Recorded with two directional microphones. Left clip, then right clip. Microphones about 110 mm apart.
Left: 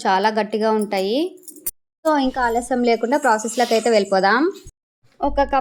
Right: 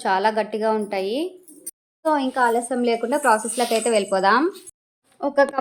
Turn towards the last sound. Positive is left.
turn(degrees=35)  # may be behind; listen again after turning